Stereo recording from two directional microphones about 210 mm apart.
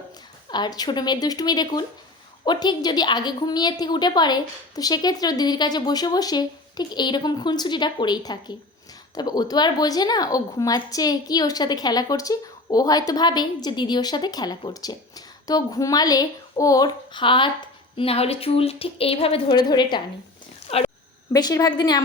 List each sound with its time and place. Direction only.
0.5 s speech: 20° left (ahead or behind)